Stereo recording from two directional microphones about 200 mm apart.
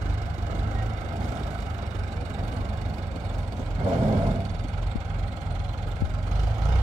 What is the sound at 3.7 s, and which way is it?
Vehicle, 30° right (ahead or behind).